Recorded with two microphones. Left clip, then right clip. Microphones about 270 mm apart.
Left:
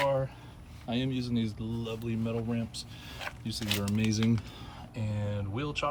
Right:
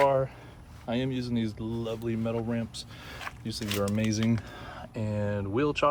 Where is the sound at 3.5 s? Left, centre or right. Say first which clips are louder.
Right 3 dB; centre.